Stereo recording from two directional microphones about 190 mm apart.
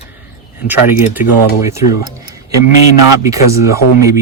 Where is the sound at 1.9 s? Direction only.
50° left (ahead or behind).